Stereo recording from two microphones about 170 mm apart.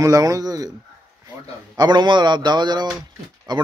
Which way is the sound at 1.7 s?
25° right (ahead or behind).